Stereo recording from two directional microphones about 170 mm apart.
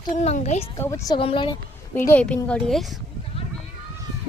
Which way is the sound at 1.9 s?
10° left (ahead or behind).